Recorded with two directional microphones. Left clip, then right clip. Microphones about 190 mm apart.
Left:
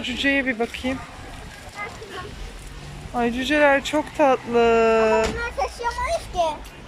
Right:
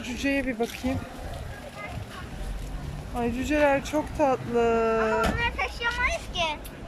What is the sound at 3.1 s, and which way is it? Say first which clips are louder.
Speech: left 6 dB; 5° right (ahead or behind).